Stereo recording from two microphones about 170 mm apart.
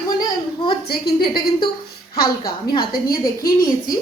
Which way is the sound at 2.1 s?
60° left (ahead or behind).